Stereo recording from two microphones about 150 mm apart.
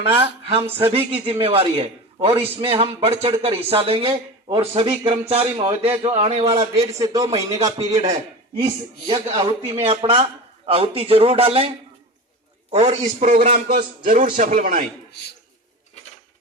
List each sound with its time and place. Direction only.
0.2 s speech: 40° right (ahead or behind)
7.0 s a man's voice: 25° right (ahead or behind)
7.3 s a man's voice: 45° right (ahead or behind)
12.7 s a man's voice: 50° right (ahead or behind)